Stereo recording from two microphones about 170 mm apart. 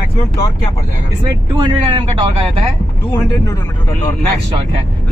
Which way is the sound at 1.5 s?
25° right (ahead or behind).